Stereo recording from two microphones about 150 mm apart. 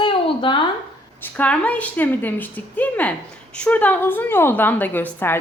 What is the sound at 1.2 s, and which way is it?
A woman's voice, 10° left (ahead or behind).